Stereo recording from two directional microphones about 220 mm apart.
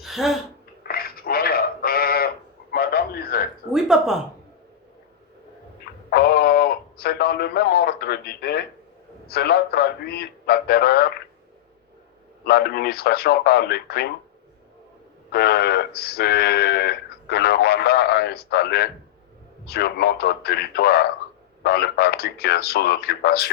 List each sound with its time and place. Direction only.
0.0 s a sound: centre (ahead or behind)
0.9 s a sound: 45° left (ahead or behind)
2.7 s radio: 45° left (ahead or behind)
3.7 s speech: centre (ahead or behind)
6.1 s radio: 45° left (ahead or behind)
9.2 s speech: 45° left (ahead or behind)
12.5 s speech: 45° left (ahead or behind)
15.3 s speech: 45° left (ahead or behind)